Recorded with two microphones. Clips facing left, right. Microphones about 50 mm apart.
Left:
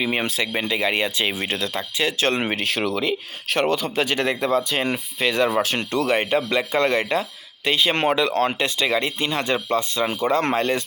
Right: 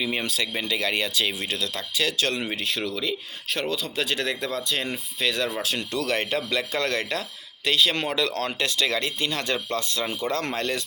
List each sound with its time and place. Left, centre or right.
0.0 s speech: left
3.0 s speech: left
3.8 s speech: left
4.3 s speech: left
5.5 s speech: left
6.1 s speech: left